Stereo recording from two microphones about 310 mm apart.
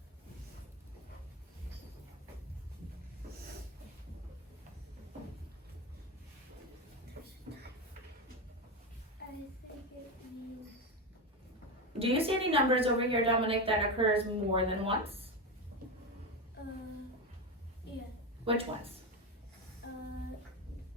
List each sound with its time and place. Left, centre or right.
11.9 s a woman's voice: centre
18.5 s speech: centre
19.8 s a sound: left